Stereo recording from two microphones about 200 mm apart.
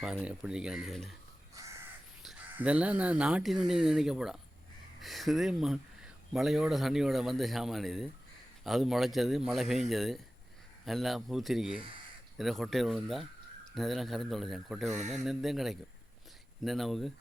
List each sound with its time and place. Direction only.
0.0 s speech: 5° right (ahead or behind)
2.2 s speech: 5° right (ahead or behind)
14.9 s speech: 35° right (ahead or behind)
15.2 s speech: centre (ahead or behind)